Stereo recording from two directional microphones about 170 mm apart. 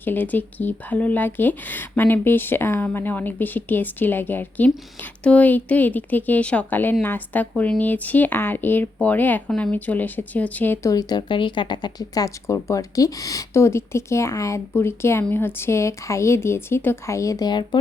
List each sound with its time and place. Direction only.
0.0 s speech: 10° left (ahead or behind)
10.9 s speech: 25° left (ahead or behind)